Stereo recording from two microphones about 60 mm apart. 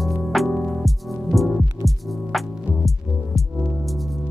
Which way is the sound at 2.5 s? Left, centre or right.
Right.